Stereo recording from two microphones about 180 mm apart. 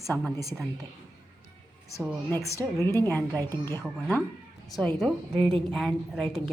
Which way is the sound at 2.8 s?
15° left (ahead or behind).